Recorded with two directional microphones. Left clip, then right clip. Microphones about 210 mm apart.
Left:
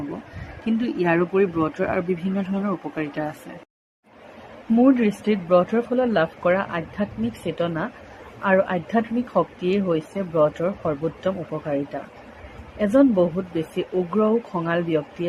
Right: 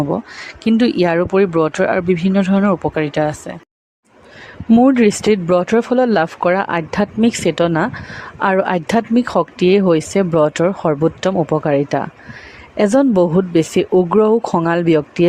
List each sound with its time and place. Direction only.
0.6 s speech: 45° right (ahead or behind)
4.8 s speech: 50° right (ahead or behind)